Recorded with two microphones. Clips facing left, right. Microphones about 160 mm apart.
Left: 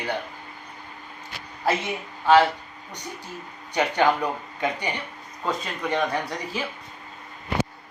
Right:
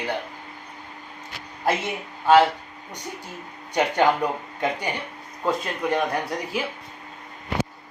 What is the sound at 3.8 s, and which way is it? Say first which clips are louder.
Speech: right 1 dB; 10° right (ahead or behind).